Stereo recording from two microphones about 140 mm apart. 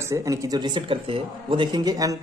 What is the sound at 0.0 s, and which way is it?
Speech, 20° right (ahead or behind).